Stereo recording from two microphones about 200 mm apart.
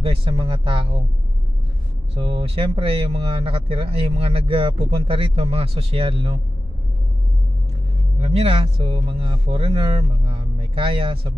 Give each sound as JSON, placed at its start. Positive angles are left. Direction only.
{"t": 0.0, "sound": "speech", "side_deg": -25}
{"t": 2.1, "sound": "speech", "side_deg": -25}
{"t": 8.2, "sound": "speech", "side_deg": -30}